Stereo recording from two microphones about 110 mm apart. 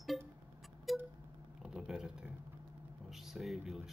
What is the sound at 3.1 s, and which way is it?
Speech, 5° right (ahead or behind).